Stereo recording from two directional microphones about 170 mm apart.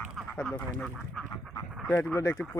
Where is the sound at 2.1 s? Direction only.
15° left (ahead or behind).